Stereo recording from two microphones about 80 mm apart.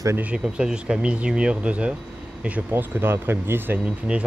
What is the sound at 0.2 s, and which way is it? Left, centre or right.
Speech, centre.